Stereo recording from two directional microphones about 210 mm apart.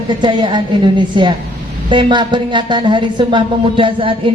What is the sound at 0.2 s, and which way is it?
A woman's voice, 20° right (ahead or behind).